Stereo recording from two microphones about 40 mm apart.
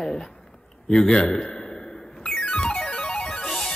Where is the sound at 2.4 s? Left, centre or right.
Left.